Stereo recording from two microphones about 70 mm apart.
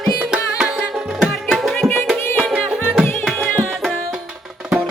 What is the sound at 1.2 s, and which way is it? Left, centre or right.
Music, centre.